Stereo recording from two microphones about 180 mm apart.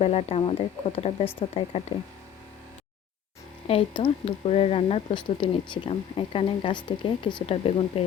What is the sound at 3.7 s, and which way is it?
Speech, 30° left (ahead or behind).